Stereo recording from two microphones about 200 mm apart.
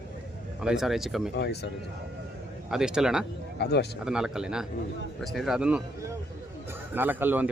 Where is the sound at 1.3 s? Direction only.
55° left (ahead or behind).